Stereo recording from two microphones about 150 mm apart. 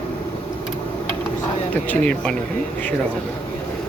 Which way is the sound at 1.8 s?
10° left (ahead or behind).